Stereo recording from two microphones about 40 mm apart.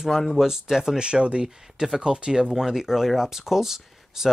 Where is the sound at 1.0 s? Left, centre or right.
Right.